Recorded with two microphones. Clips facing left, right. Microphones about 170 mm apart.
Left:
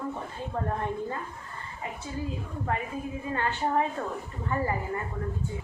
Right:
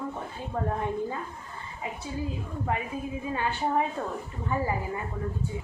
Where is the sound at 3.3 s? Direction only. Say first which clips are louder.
Even; 10° right (ahead or behind).